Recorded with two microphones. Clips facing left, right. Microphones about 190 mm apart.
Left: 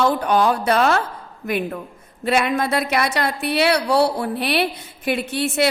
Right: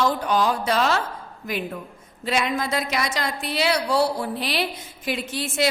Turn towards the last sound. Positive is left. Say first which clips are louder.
# left 5 dB
turn(degrees=60)  # may be behind; listen again after turning